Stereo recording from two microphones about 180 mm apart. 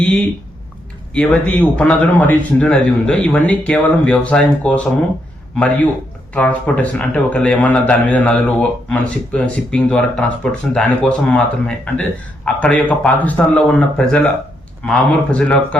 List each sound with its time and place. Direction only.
1.1 s speech: 5° left (ahead or behind)